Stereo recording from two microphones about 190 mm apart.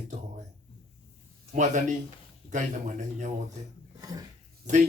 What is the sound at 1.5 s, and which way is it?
A man's voice, 40° right (ahead or behind).